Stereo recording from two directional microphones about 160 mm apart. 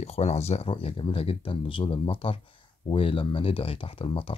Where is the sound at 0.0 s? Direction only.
40° left (ahead or behind).